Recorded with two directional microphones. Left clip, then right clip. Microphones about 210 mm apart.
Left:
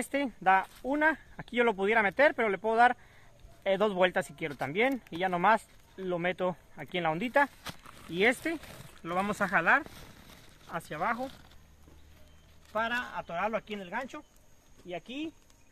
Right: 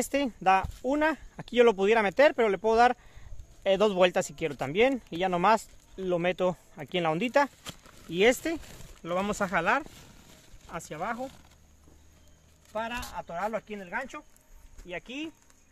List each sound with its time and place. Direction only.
0.0 s speech: 55° right (ahead or behind)
10.7 s speech: 25° right (ahead or behind)
11.1 s speech: 10° right (ahead or behind)
12.7 s speech: 5° right (ahead or behind)
14.9 s speech: 20° right (ahead or behind)